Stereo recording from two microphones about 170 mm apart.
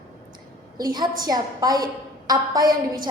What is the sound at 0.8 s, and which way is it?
A woman's voice, 25° right (ahead or behind).